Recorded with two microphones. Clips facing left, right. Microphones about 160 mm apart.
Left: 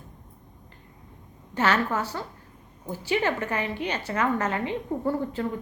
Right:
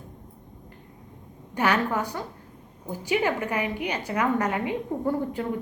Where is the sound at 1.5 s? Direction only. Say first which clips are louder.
Even; 15° right (ahead or behind).